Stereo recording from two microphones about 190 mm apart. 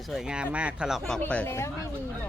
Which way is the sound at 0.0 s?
Centre (ahead or behind).